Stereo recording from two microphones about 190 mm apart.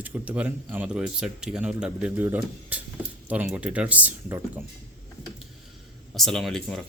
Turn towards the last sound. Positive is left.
turn(degrees=0)  # may be behind; listen again after turning